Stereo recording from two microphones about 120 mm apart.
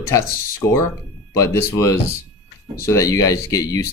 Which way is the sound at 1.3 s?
25° left (ahead or behind).